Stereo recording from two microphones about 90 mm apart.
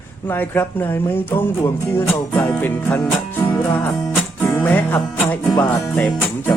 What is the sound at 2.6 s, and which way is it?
Music, 20° left (ahead or behind).